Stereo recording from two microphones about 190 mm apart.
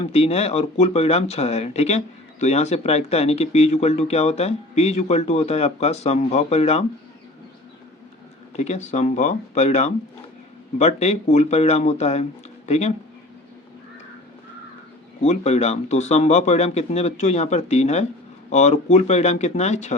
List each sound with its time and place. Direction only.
0.0 s speech: 35° left (ahead or behind)
8.5 s speech: 35° left (ahead or behind)
15.2 s speech: 35° left (ahead or behind)